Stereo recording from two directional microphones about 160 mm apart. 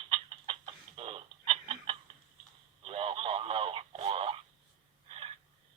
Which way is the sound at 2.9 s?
35° right (ahead or behind).